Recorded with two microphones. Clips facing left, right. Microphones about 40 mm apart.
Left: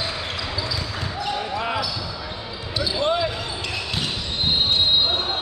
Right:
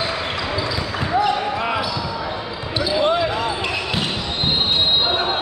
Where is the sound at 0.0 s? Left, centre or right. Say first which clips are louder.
Right 5 dB; right.